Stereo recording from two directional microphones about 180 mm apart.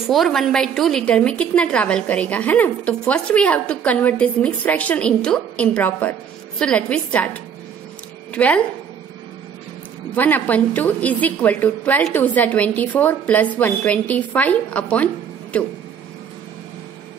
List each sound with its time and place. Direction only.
0.0 s a woman's voice: centre (ahead or behind)
8.3 s speech: 5° left (ahead or behind)
10.1 s a woman's voice: 10° left (ahead or behind)